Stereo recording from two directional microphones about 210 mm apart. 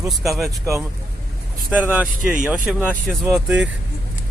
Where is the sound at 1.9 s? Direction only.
5° right (ahead or behind).